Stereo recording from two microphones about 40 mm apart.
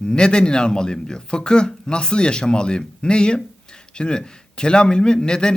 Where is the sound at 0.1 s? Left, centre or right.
Left.